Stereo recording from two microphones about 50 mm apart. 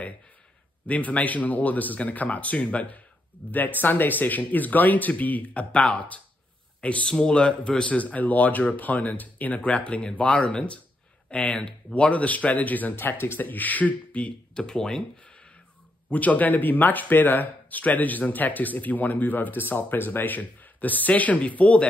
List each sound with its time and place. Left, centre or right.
0.8 s speech: left
7.9 s speech: left
12.9 s speech: left
13.4 s speech: left
14.5 s speech: centre
15.2 s a sound: centre
16.1 s speech: left